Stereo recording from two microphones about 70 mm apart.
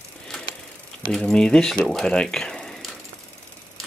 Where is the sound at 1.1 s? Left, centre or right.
Centre.